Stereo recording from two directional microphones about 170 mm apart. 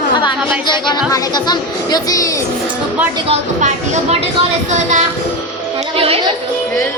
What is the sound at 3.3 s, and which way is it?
Speech, 40° right (ahead or behind).